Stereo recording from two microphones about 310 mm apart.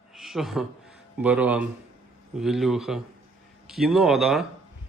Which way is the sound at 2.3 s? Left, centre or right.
Centre.